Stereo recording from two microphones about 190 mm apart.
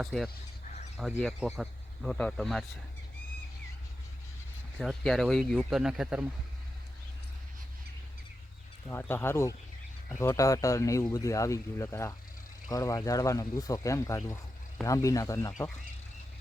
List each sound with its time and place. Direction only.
0.0 s speech: centre (ahead or behind)
1.4 s speech: 5° right (ahead or behind)
4.8 s speech: centre (ahead or behind)
8.9 s speech: 10° left (ahead or behind)